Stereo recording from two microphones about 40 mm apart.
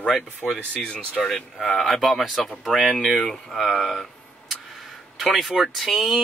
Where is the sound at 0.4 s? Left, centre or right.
Left.